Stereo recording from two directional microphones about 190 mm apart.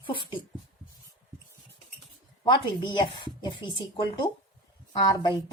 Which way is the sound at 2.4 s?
20° left (ahead or behind).